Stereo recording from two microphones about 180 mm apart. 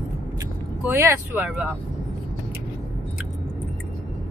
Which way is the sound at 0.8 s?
10° right (ahead or behind).